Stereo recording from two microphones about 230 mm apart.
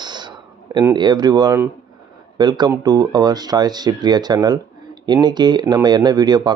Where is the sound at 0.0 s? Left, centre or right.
Centre.